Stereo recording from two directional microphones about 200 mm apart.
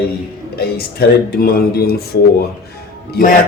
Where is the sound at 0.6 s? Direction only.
50° left (ahead or behind).